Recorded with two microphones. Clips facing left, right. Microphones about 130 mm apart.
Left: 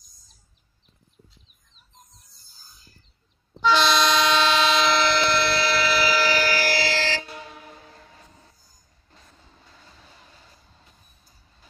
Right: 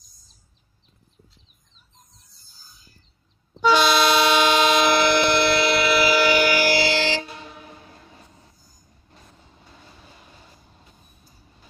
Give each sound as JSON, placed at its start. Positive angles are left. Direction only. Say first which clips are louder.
{"t": 3.6, "sound": "train", "louder": "right 2 dB", "side_deg": -10}
{"t": 9.7, "sound": "vehicle", "louder": "right 4 dB", "side_deg": -15}